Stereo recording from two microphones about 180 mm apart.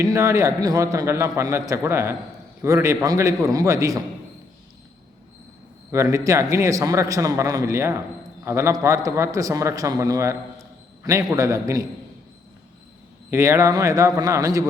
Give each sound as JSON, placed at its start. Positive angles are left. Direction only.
{"t": 0.0, "sound": "a man's voice", "side_deg": -15}
{"t": 5.9, "sound": "a man's voice", "side_deg": -15}
{"t": 13.3, "sound": "a man's voice", "side_deg": -15}